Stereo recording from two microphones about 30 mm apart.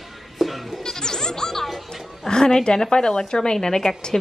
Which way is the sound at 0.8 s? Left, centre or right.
Centre.